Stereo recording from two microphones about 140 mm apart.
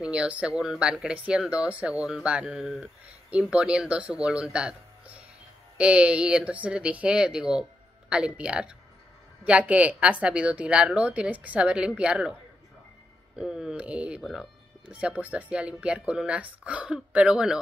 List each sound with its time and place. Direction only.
0.0 s speech: 5° right (ahead or behind)
13.4 s speech: 5° right (ahead or behind)